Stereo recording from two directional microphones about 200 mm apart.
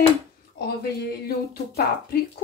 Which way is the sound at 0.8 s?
50° left (ahead or behind).